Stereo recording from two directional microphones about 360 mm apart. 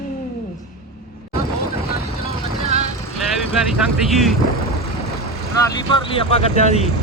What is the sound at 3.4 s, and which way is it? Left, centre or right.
Speech, centre.